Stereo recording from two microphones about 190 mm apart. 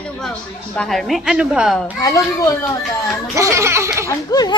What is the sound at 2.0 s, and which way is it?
Speech, 15° left (ahead or behind).